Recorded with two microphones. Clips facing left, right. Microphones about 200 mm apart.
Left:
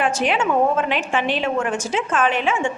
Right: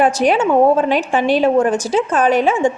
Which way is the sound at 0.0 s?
40° right (ahead or behind).